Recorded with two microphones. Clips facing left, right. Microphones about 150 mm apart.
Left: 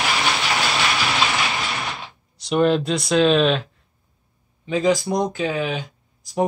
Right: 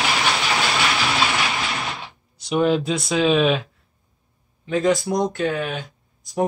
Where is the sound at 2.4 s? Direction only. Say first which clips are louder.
Left 1 dB; 5° right (ahead or behind).